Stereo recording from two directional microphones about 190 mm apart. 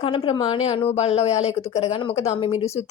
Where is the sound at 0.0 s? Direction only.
30° left (ahead or behind).